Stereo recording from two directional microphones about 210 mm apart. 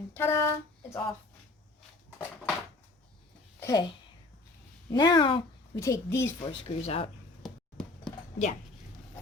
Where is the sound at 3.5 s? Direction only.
15° left (ahead or behind).